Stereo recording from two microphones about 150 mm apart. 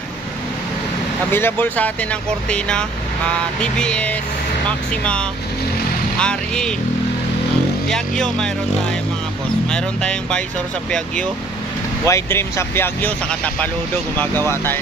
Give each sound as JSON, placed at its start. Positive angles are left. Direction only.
{"t": 1.3, "sound": "speech", "side_deg": 15}
{"t": 3.6, "sound": "speech", "side_deg": 5}
{"t": 6.1, "sound": "speech", "side_deg": 5}
{"t": 7.9, "sound": "speech", "side_deg": 5}
{"t": 9.7, "sound": "speech", "side_deg": 5}
{"t": 12.1, "sound": "speech", "side_deg": 15}